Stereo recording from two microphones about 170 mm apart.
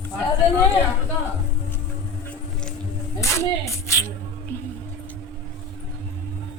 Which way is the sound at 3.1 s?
15° left (ahead or behind).